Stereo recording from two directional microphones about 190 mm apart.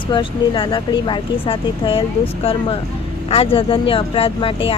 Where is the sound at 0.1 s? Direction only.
25° left (ahead or behind).